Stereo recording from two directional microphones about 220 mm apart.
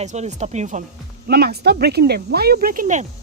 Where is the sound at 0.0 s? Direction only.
30° right (ahead or behind).